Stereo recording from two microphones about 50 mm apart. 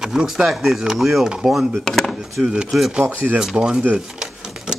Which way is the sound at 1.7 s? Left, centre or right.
Centre.